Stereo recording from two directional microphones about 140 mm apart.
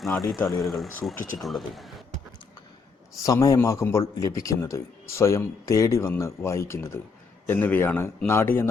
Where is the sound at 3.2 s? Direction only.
25° left (ahead or behind).